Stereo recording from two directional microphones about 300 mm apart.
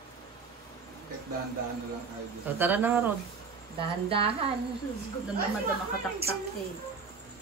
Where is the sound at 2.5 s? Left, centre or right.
Centre.